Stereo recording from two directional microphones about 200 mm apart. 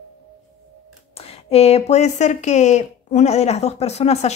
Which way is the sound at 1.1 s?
30° left (ahead or behind).